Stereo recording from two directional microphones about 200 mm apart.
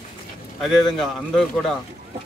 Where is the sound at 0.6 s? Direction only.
Centre (ahead or behind).